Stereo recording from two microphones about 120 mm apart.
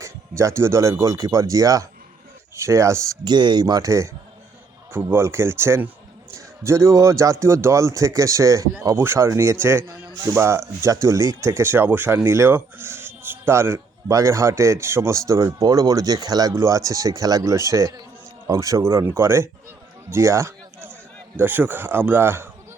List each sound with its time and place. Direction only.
0.0 s speech: 25° right (ahead or behind)
3.2 s speech: 40° right (ahead or behind); by 19.5 s 20° right (ahead or behind)
20.1 s a sound: 20° right (ahead or behind)
21.3 s speech: 15° right (ahead or behind)